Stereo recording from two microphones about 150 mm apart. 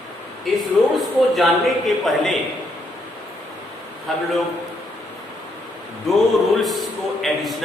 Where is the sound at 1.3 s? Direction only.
Centre (ahead or behind).